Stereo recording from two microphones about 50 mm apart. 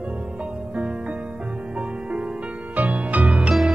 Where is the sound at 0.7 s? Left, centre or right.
Right.